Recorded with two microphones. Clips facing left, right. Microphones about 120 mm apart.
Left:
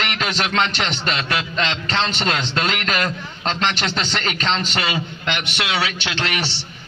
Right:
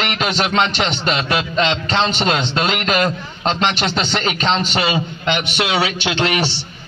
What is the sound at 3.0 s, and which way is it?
Speech, 35° right (ahead or behind).